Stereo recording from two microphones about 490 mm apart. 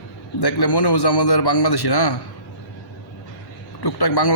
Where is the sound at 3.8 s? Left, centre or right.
Left.